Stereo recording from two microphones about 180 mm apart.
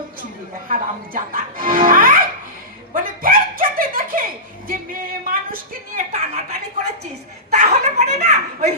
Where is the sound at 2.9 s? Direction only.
50° right (ahead or behind).